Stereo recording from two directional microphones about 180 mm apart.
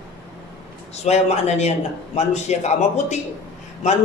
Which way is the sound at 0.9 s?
40° left (ahead or behind).